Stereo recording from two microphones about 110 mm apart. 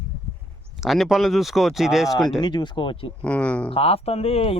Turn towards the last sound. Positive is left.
turn(degrees=65)  # may be behind; listen again after turning